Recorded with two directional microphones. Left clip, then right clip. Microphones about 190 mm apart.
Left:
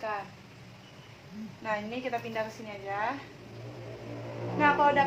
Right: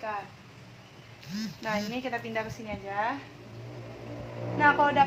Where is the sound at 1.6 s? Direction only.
45° right (ahead or behind).